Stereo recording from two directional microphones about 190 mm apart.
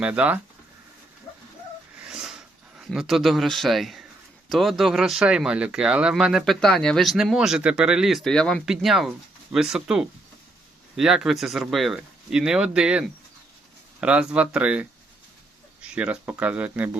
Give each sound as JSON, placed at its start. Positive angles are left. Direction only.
{"t": 0.0, "sound": "speech", "side_deg": -10}
{"t": 2.0, "sound": "a sound", "side_deg": -5}
{"t": 2.7, "sound": "speech", "side_deg": -5}